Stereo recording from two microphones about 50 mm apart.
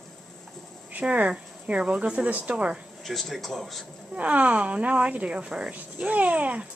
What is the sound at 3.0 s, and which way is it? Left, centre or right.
Speech, centre.